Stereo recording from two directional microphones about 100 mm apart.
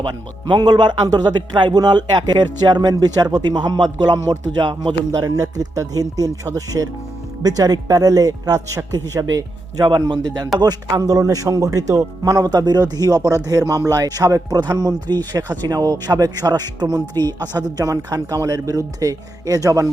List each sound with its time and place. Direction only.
0.1 s speech: 50° right (ahead or behind)
6.7 s speech: 20° right (ahead or behind)
7.4 s speech: 40° right (ahead or behind)
10.1 s speech: 45° right (ahead or behind)